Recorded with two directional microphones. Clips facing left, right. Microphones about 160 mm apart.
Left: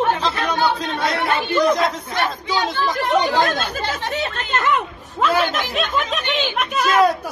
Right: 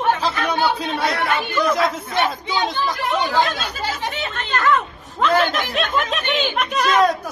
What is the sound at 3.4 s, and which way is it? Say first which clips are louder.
Speech: left 1 dB; 45° left (ahead or behind).